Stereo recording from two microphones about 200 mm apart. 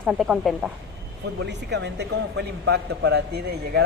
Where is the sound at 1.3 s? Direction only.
60° right (ahead or behind).